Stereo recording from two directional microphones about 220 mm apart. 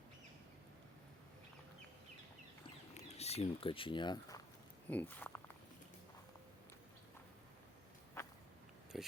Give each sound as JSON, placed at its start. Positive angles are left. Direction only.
{"t": 2.9, "sound": "speech", "side_deg": 30}
{"t": 4.9, "sound": "speech", "side_deg": 10}
{"t": 8.2, "sound": "a sound", "side_deg": 15}
{"t": 8.9, "sound": "speech", "side_deg": 0}